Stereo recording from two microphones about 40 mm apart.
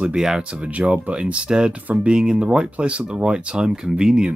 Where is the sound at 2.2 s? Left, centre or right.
Centre.